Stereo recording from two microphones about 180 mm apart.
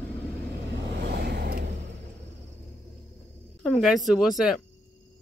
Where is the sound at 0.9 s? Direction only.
60° right (ahead or behind).